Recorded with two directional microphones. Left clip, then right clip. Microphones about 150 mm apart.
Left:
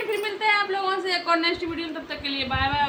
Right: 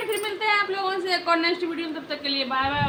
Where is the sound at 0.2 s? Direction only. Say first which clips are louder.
Left 1 dB; 15° left (ahead or behind).